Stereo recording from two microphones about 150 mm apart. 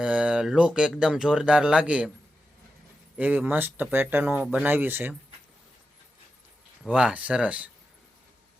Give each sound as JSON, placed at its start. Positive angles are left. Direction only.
{"t": 0.0, "sound": "speech", "side_deg": -5}
{"t": 3.2, "sound": "speech", "side_deg": -10}
{"t": 6.8, "sound": "speech", "side_deg": -5}